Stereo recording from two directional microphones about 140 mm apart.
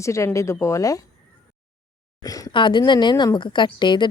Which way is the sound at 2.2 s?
25° left (ahead or behind).